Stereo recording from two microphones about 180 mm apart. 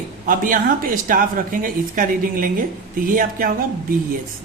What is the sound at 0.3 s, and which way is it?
Speech, 50° right (ahead or behind).